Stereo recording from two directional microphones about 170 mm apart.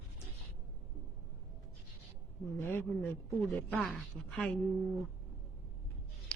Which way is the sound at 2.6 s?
15° left (ahead or behind).